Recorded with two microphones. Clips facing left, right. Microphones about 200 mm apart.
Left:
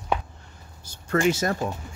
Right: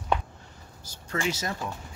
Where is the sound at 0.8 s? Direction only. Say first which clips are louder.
Left 8 dB; 55° left (ahead or behind).